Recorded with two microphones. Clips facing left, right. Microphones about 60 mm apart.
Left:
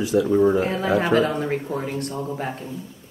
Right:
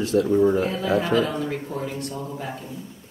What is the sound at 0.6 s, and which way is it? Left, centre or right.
Speech, left.